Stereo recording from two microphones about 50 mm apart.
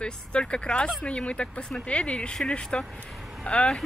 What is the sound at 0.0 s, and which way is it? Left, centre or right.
Speech, centre.